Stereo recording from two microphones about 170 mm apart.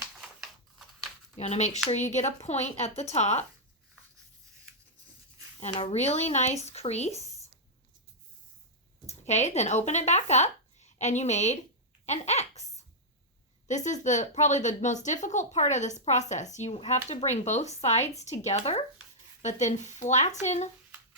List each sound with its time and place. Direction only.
1.4 s speech: 40° left (ahead or behind)
5.7 s speech: 40° left (ahead or behind)
9.0 s speech: 40° left (ahead or behind)